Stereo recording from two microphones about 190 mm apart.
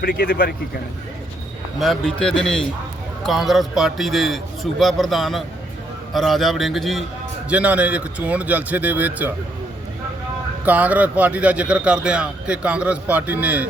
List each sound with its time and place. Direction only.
0.0 s speech: 55° left (ahead or behind)
1.8 s a man's voice: centre (ahead or behind)
10.7 s a man's voice: 10° right (ahead or behind)